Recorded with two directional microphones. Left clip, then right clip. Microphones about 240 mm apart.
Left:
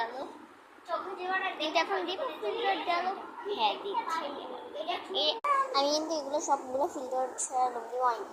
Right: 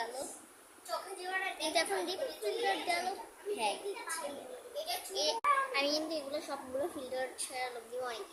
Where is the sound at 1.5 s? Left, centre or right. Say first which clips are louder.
Left 4 dB; centre.